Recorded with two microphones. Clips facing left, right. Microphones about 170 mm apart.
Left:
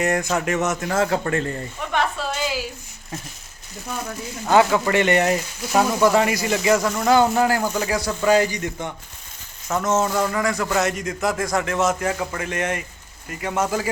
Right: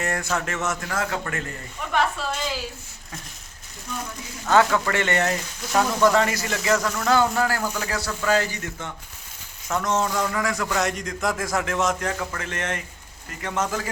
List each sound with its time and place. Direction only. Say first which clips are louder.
0.0 s speech: left 5 dB; 20° left (ahead or behind)
1.9 s a sound: even; centre (ahead or behind)
4.4 s a man's voice: left 2 dB; 15° left (ahead or behind)